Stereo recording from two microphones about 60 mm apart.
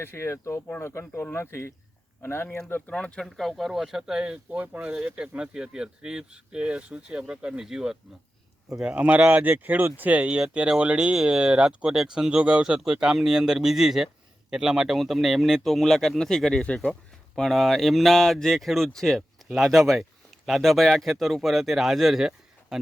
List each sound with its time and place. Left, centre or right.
0.0 s speech: left
2.9 s speech: centre
3.2 s speech: centre
4.6 s speech: right; by 16.9 s centre
17.3 s speech: centre